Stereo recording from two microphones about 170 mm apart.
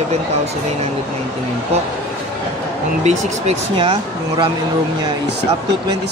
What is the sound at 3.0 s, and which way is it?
Speech, 45° right (ahead or behind).